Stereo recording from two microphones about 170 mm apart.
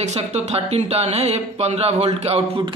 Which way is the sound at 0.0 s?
40° right (ahead or behind).